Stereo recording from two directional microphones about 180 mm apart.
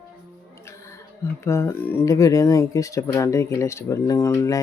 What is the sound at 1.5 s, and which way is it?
Speech, 15° left (ahead or behind).